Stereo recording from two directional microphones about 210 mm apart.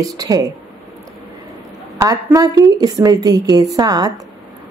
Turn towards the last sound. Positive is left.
turn(degrees=-20)  # may be behind; listen again after turning